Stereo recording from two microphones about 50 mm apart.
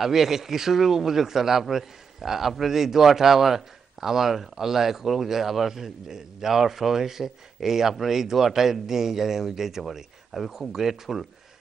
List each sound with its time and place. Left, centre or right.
0.0 s speech: centre